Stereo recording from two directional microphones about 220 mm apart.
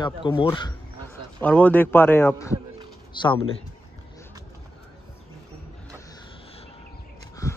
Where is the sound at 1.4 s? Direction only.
5° left (ahead or behind).